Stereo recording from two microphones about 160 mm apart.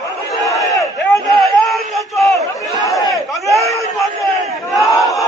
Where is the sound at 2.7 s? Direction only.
20° left (ahead or behind).